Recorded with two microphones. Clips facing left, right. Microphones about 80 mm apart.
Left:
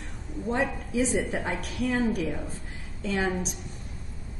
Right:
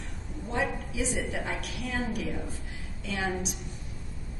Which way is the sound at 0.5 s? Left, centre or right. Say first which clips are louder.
Left 3 dB; left.